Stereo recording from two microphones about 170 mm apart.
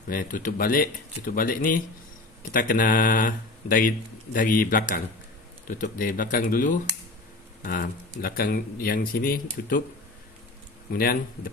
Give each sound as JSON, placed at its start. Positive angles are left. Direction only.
{"t": 0.1, "sound": "speech", "side_deg": 55}
{"t": 10.9, "sound": "speech", "side_deg": 60}